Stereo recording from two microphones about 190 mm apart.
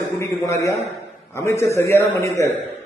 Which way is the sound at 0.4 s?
15° left (ahead or behind).